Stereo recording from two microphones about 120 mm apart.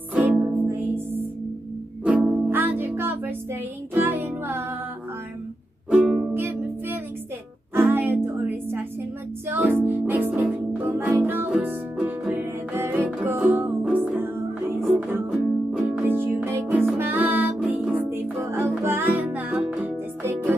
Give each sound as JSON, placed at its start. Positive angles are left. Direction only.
{"t": 0.1, "sound": "music", "side_deg": -15}
{"t": 2.0, "sound": "music", "side_deg": -10}
{"t": 5.9, "sound": "music", "side_deg": -5}
{"t": 7.7, "sound": "music", "side_deg": -15}
{"t": 15.3, "sound": "music", "side_deg": -5}
{"t": 16.0, "sound": "music", "side_deg": -20}